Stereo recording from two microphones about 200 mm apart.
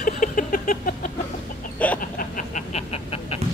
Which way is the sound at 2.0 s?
45° left (ahead or behind).